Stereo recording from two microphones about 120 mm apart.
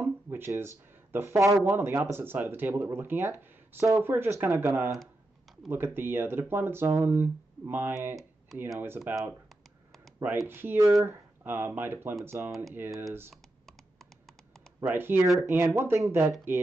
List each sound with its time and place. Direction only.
0.0 s a sound: 15° right (ahead or behind)
1.1 s speech: 25° right (ahead or behind)
10.1 s speech: 25° right (ahead or behind)
12.4 s speech: centre (ahead or behind)
12.7 s speech: 15° right (ahead or behind)
13.3 s computer keyboard: centre (ahead or behind)
14.8 s speech: 15° right (ahead or behind)